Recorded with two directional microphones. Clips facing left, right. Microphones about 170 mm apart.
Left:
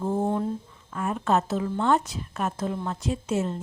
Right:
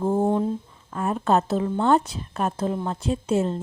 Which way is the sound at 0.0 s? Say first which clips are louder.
Right 4 dB; 35° right (ahead or behind).